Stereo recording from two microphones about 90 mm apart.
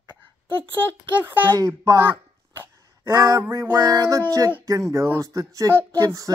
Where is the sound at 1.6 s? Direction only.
35° right (ahead or behind).